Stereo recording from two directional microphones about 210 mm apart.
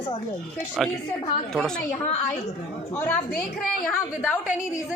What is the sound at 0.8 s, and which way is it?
Speech, centre (ahead or behind).